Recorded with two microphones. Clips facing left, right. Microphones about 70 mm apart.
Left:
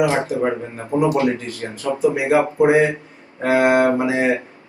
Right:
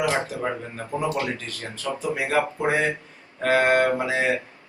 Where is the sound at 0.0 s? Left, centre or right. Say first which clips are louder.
Left 6 dB; left.